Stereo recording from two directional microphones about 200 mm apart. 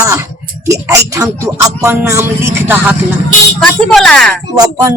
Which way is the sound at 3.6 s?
5° left (ahead or behind).